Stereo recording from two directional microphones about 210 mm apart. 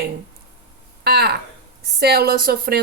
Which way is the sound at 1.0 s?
50° right (ahead or behind).